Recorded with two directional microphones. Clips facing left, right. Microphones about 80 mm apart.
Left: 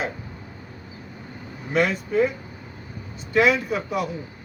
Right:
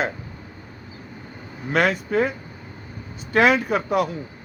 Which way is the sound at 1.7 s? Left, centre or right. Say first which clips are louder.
Right 1 dB; right.